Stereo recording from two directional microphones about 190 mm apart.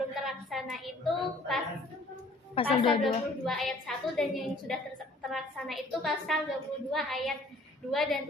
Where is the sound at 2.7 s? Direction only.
30° left (ahead or behind).